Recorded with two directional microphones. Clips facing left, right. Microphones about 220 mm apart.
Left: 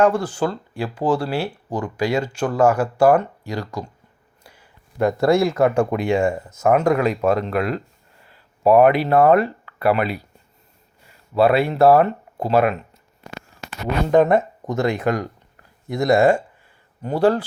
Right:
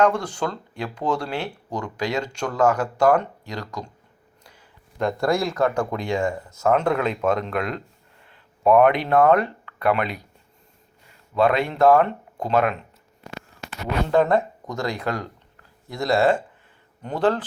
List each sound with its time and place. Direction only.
0.0 s speech: 5° left (ahead or behind)
4.4 s a sound: 10° left (ahead or behind)
5.3 s speech: 25° left (ahead or behind); by 10.2 s 5° left (ahead or behind)
11.3 s speech: 5° left (ahead or behind)
14.1 s speech: 20° left (ahead or behind)